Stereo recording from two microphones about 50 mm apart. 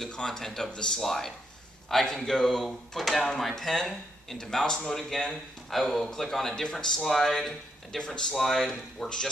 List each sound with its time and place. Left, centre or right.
0.0 s speech: centre
8.0 s speech: centre
8.4 s speech: centre